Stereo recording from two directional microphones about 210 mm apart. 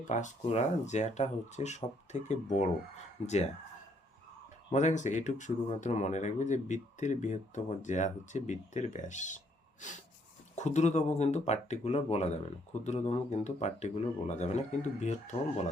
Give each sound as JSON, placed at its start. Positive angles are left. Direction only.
{"t": 0.1, "sound": "speech", "side_deg": 35}
{"t": 4.7, "sound": "speech", "side_deg": 35}